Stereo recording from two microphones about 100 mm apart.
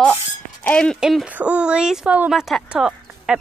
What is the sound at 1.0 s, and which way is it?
Speech, 5° right (ahead or behind).